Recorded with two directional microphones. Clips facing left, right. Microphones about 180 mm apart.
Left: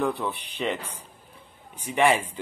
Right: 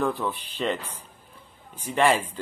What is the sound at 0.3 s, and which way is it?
Speech, 70° left (ahead or behind).